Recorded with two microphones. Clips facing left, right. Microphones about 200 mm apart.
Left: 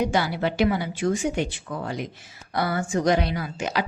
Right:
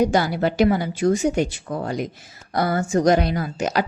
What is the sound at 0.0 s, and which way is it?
A woman's voice, 40° right (ahead or behind).